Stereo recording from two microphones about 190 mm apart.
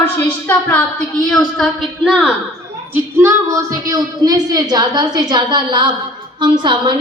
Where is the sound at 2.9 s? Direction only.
15° right (ahead or behind).